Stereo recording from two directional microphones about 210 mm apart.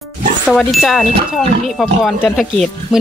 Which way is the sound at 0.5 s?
Centre (ahead or behind).